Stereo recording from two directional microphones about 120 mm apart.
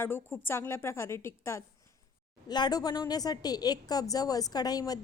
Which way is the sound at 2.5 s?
35° left (ahead or behind).